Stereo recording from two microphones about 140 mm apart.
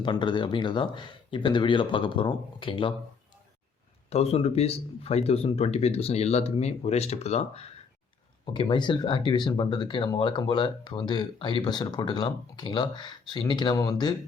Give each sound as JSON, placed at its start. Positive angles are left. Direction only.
{"t": 0.0, "sound": "speech", "side_deg": 35}
{"t": 4.1, "sound": "speech", "side_deg": 45}
{"t": 8.5, "sound": "speech", "side_deg": 35}